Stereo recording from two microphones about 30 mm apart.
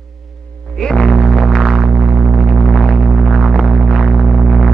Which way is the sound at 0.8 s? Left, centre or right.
Left.